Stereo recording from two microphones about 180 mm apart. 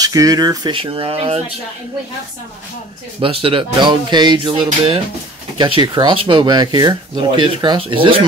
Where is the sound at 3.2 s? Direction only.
30° right (ahead or behind).